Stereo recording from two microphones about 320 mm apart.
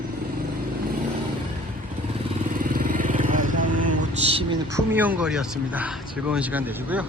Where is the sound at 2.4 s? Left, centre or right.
Right.